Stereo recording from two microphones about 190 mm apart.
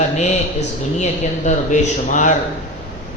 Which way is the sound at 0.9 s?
40° left (ahead or behind).